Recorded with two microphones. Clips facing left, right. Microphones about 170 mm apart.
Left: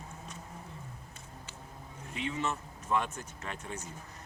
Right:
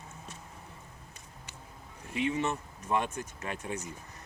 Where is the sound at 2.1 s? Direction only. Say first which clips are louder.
Right 4 dB; 15° right (ahead or behind).